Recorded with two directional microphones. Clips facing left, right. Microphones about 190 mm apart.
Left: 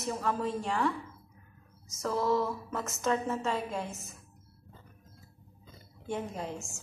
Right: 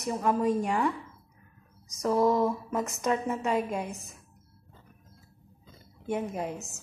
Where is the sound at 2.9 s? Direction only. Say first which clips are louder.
Left 1 dB; 15° right (ahead or behind).